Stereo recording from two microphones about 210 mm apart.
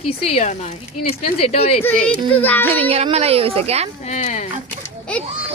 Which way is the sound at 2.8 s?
25° right (ahead or behind).